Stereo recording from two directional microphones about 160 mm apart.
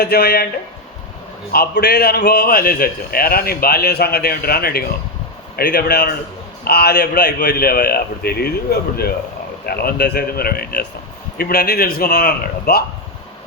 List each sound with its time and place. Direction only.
0.0 s speech: 80° left
1.5 s a man's voice: 85° left; by 12.8 s 70° left (ahead or behind)